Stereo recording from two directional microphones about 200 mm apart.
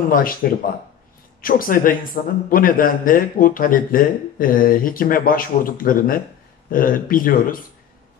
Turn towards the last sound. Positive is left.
turn(degrees=45)  # may be behind; listen again after turning